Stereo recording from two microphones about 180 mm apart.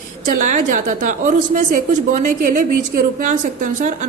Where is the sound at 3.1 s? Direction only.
45° right (ahead or behind).